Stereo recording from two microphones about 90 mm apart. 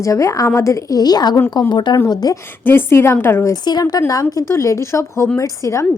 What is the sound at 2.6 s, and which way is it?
Speech, 25° left (ahead or behind).